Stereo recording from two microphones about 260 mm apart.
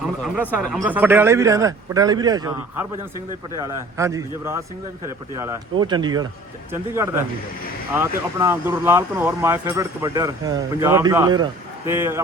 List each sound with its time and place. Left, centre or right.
0.4 s speech: centre
3.6 s speech: centre